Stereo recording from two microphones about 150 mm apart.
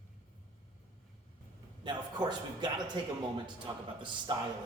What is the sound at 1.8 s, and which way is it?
A man's voice, 30° right (ahead or behind).